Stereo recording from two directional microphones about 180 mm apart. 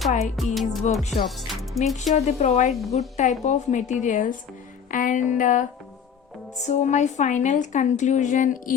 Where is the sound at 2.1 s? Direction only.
40° left (ahead or behind).